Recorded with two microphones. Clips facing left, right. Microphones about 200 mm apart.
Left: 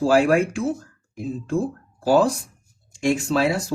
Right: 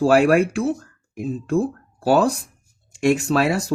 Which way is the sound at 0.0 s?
70° right (ahead or behind).